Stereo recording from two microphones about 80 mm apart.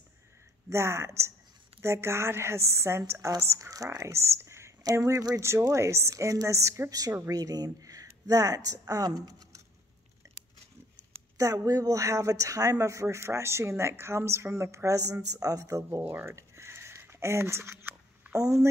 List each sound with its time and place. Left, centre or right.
0.7 s speech: right
6.9 s speech: right
11.3 s speech: right
16.0 s a sound: right
18.3 s speech: right